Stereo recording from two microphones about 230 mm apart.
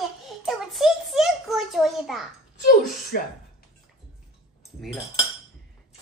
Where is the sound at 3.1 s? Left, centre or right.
Left.